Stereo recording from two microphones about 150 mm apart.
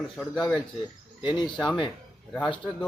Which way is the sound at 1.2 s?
30° left (ahead or behind).